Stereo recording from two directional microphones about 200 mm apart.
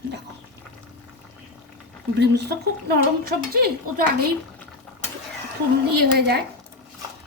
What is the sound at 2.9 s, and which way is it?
Speech, 50° right (ahead or behind).